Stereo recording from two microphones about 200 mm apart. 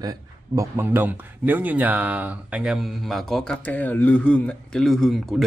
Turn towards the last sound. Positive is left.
turn(degrees=0)  # may be behind; listen again after turning